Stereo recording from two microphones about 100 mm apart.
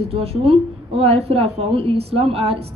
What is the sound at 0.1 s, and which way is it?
A woman's voice, 80° right.